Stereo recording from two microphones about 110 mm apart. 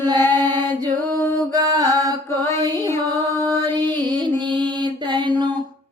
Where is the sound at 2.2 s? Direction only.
25° left (ahead or behind).